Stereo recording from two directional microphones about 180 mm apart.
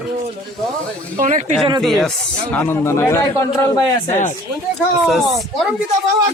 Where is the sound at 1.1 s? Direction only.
45° right (ahead or behind).